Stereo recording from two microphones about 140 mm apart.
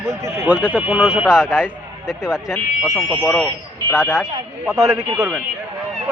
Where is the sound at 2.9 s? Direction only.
20° left (ahead or behind).